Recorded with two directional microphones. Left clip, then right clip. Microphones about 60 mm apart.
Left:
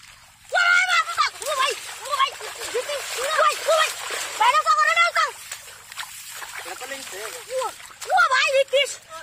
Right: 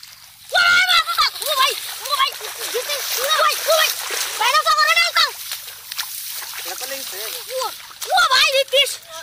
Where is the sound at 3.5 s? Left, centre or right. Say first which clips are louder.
Right 3 dB; left.